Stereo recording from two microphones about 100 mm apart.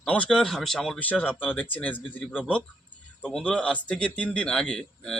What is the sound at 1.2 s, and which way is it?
Speech, 20° left (ahead or behind).